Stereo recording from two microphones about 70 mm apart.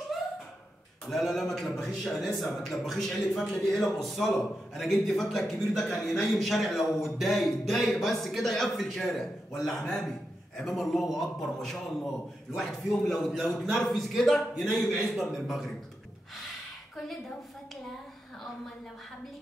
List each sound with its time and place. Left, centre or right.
1.1 s a man's voice: centre